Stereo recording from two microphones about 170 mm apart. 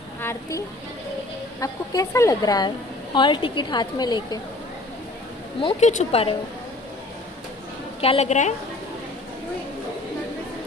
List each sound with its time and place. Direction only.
0.2 s a woman's voice: 15° left (ahead or behind)
5.6 s speech: 40° left (ahead or behind)
8.0 s speech: 40° left (ahead or behind)